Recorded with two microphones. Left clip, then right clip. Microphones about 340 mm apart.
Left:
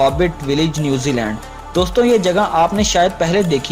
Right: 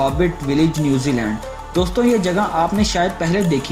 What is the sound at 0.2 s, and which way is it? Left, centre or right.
Speech, left.